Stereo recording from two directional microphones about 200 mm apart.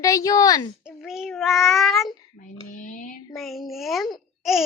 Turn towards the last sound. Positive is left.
turn(degrees=0)  # may be behind; listen again after turning